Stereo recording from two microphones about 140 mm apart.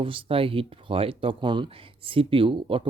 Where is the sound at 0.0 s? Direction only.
40° right (ahead or behind).